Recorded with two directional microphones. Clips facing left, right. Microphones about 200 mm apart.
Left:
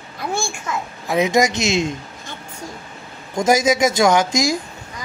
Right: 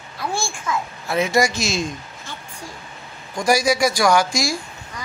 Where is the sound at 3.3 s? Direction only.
20° left (ahead or behind).